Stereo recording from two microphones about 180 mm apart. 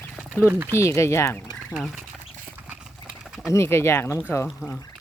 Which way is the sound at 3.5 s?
15° left (ahead or behind).